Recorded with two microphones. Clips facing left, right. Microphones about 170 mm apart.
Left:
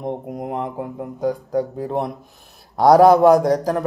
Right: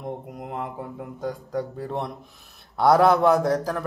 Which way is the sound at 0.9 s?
50° left (ahead or behind).